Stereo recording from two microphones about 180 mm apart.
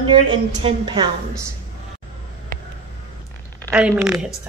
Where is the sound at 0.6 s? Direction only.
25° right (ahead or behind).